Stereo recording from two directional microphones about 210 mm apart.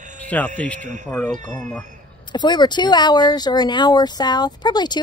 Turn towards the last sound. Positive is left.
turn(degrees=20)  # may be behind; listen again after turning